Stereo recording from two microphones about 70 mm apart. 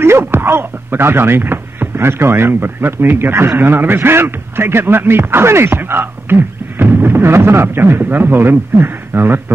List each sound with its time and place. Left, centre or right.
0.0 s speech: right